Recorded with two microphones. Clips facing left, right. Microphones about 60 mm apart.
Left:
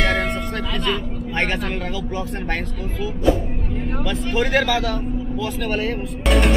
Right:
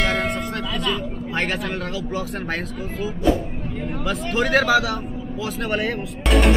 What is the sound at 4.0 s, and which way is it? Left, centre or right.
Speech, centre.